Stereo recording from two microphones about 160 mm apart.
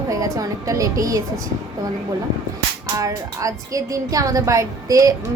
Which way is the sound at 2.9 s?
20° right (ahead or behind).